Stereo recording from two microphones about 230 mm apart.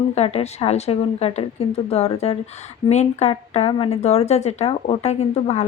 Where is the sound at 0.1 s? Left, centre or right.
Left.